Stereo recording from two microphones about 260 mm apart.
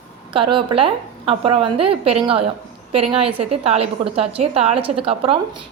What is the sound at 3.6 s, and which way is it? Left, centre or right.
A woman's voice, right.